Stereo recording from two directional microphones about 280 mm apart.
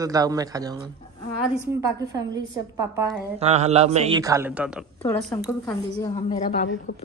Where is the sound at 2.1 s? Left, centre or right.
Centre.